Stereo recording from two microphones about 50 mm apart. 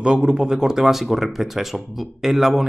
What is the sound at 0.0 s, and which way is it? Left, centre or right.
Speech, centre.